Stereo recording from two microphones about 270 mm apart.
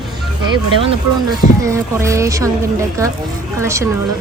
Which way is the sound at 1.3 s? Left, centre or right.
Centre.